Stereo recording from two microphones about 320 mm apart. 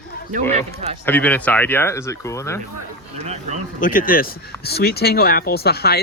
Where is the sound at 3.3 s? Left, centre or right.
Right.